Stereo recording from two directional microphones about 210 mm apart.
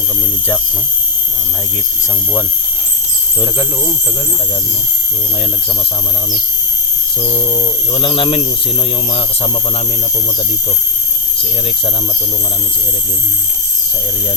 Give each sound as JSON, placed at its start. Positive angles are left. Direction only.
{"t": 7.2, "sound": "insect", "side_deg": 25}